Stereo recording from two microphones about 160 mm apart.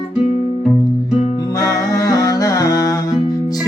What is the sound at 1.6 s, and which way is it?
Music, 20° left (ahead or behind).